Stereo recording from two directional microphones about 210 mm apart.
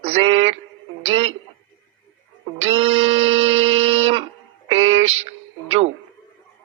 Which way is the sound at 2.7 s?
30° right (ahead or behind).